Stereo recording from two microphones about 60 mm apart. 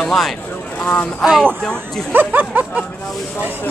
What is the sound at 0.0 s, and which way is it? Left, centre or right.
Speech, centre.